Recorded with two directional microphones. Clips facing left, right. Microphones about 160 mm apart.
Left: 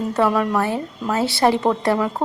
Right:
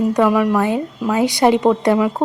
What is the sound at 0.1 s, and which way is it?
A woman's voice, 10° right (ahead or behind).